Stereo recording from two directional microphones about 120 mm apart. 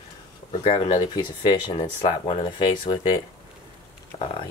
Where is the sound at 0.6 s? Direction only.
40° left (ahead or behind).